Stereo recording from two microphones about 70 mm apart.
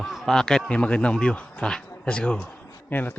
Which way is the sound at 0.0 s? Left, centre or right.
Centre.